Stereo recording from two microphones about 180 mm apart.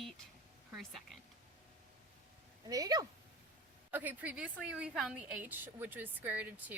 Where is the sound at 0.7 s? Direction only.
Centre (ahead or behind).